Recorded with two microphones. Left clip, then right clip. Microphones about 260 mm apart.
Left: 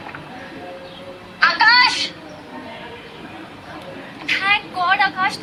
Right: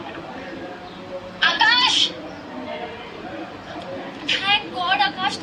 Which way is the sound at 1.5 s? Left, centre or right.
Centre.